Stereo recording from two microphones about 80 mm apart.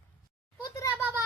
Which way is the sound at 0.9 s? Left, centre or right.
Right.